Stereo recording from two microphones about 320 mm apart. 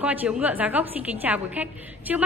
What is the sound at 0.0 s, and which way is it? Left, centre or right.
A woman's voice, centre.